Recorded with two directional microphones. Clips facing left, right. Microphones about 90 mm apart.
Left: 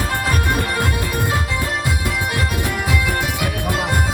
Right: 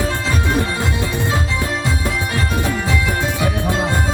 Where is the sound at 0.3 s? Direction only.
25° right (ahead or behind).